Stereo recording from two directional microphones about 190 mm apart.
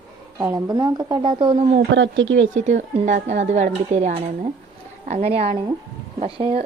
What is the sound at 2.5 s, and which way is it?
A woman's voice, 35° right (ahead or behind).